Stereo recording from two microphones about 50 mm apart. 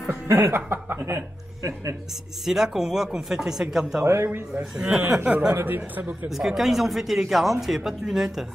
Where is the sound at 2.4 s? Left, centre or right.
Centre.